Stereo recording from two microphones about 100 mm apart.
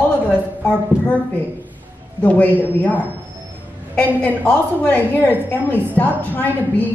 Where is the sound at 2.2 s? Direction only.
15° left (ahead or behind).